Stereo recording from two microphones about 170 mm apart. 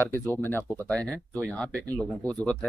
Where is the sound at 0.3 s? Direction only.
15° left (ahead or behind).